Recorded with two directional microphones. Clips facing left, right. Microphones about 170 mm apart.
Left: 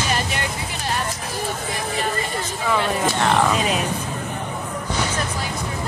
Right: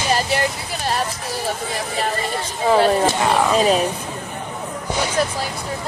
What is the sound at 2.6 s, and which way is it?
Speech, 35° right (ahead or behind).